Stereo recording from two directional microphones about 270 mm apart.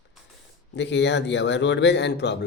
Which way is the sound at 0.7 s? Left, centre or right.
Left.